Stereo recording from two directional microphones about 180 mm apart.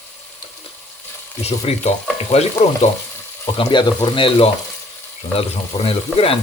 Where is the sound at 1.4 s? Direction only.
35° left (ahead or behind).